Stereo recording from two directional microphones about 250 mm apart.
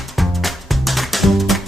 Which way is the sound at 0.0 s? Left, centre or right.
Centre.